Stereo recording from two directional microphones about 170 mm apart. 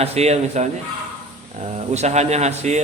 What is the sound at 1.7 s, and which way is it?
A man's voice, 40° right (ahead or behind).